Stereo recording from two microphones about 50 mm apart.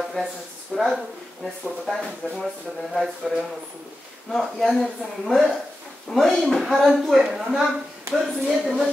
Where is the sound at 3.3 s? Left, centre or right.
Centre.